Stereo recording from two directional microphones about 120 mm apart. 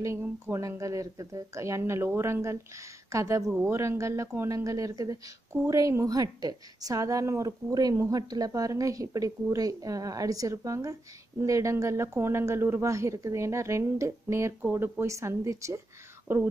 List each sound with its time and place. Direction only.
0.0 s a woman's voice: 25° right (ahead or behind)